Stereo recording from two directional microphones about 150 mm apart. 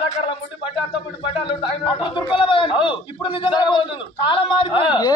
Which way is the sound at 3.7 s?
35° left (ahead or behind).